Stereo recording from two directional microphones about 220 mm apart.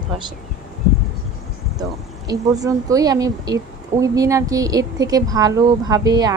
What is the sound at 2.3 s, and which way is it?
A woman's voice, 15° right (ahead or behind).